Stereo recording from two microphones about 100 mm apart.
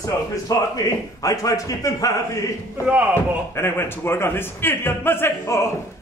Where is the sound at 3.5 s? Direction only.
25° left (ahead or behind).